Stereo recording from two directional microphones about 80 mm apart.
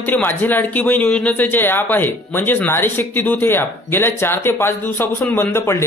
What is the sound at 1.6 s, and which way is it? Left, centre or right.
Speech, left.